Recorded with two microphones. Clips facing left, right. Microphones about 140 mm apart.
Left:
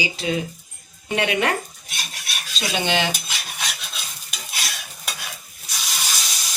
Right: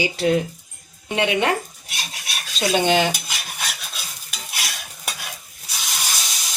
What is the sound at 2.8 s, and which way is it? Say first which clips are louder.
Speech: right 3 dB; 45° right (ahead or behind).